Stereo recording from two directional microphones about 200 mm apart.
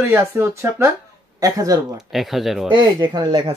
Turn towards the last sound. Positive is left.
turn(degrees=-20)  # may be behind; listen again after turning